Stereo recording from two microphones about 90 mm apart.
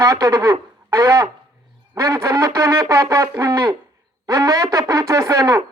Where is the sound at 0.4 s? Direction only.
35° right (ahead or behind).